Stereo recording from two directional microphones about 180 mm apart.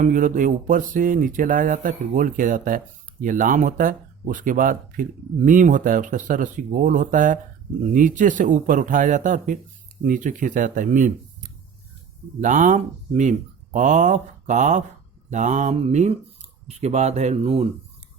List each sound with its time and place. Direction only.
0.0 s speech: 45° right (ahead or behind)